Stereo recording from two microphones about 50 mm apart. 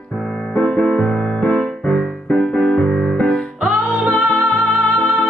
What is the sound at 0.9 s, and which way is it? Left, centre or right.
Music, centre.